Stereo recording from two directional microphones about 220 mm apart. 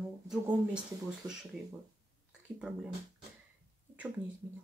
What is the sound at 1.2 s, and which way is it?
Speech, 15° right (ahead or behind).